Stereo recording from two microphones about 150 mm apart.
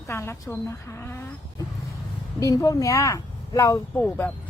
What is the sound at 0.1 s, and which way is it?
A woman's voice, 15° left (ahead or behind).